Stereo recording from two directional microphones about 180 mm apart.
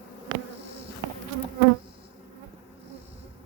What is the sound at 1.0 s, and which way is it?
Bee, 15° right (ahead or behind).